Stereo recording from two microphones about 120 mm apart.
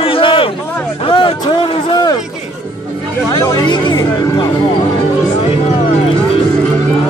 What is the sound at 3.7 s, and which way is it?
Speech, 40° left (ahead or behind).